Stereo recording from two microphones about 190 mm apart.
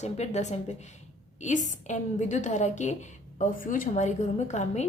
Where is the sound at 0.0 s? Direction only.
35° left (ahead or behind).